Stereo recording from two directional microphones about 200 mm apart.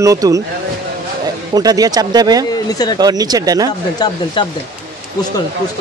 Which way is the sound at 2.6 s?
20° left (ahead or behind).